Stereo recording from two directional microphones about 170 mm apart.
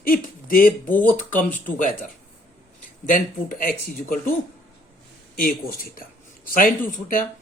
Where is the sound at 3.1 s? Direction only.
55° left (ahead or behind).